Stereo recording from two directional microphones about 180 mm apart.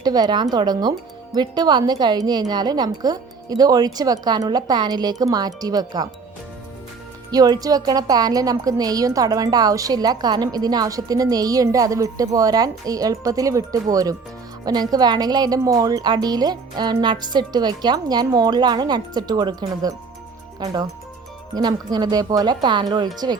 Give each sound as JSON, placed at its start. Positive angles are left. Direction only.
{"t": 0.0, "sound": "a woman's voice", "side_deg": -20}
{"t": 7.3, "sound": "a woman's voice", "side_deg": -20}
{"t": 21.5, "sound": "a woman's voice", "side_deg": -20}